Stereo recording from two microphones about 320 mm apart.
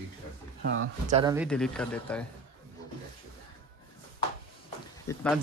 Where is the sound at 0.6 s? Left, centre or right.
Right.